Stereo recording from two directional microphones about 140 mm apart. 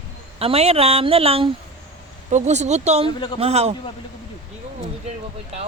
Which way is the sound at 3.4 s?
50° right (ahead or behind).